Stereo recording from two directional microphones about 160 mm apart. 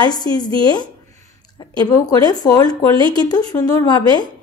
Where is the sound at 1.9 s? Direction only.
25° left (ahead or behind).